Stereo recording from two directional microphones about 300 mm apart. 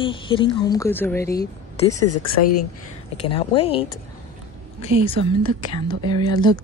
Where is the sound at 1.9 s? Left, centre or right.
Left.